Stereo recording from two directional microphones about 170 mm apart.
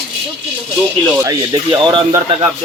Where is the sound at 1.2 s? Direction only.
20° right (ahead or behind).